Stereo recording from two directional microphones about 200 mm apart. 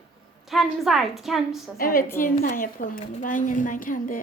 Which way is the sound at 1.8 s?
45° left (ahead or behind).